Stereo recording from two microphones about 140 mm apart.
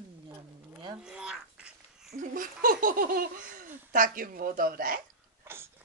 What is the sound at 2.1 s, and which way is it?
Speech, 75° right (ahead or behind).